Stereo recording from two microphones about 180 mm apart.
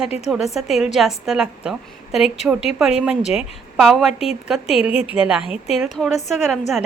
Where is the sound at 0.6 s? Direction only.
Centre (ahead or behind).